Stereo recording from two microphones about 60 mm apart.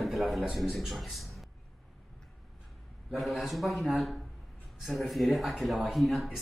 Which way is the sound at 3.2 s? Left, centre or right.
Centre.